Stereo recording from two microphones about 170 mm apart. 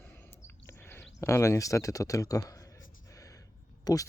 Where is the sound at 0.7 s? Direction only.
15° left (ahead or behind).